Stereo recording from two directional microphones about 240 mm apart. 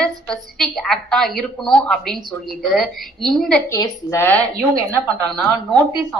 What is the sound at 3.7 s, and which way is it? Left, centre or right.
Speech, centre.